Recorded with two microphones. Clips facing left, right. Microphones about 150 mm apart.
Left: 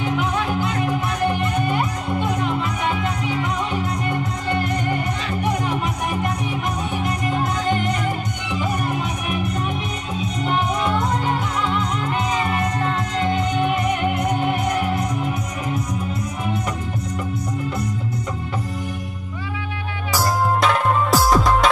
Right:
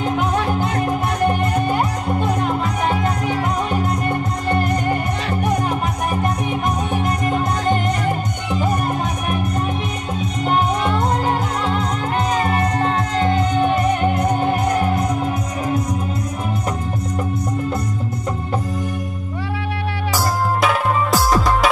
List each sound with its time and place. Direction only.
0.0 s music: 40° right (ahead or behind)
8.5 s music: 45° right (ahead or behind)
10.4 s music: 40° right (ahead or behind)
20.6 s music: centre (ahead or behind)